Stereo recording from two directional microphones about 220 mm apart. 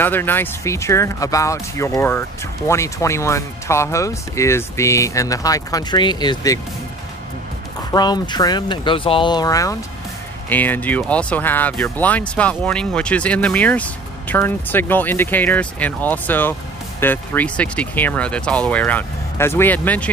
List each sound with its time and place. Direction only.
0.0 s speech: 10° left (ahead or behind)
7.9 s speech: 20° left (ahead or behind)